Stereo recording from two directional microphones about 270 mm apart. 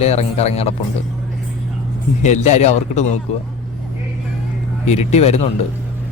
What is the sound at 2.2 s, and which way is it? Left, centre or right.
Speech, left.